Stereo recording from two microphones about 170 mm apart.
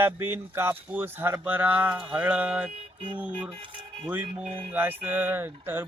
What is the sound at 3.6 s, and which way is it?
Speech, 30° right (ahead or behind).